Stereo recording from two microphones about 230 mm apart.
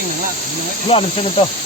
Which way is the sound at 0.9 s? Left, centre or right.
Left.